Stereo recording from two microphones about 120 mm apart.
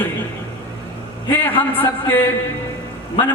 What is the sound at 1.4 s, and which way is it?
Speech, 15° left (ahead or behind).